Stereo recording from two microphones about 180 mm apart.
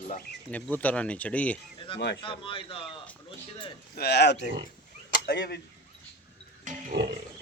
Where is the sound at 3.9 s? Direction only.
65° left (ahead or behind).